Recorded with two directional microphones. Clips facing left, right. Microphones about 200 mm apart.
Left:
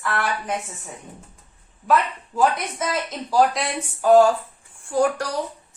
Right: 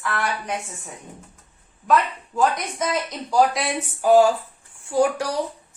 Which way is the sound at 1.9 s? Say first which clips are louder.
Even; 5° left (ahead or behind).